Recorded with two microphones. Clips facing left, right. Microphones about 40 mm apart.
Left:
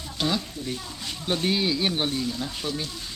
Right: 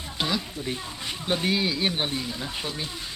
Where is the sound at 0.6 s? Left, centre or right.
Right.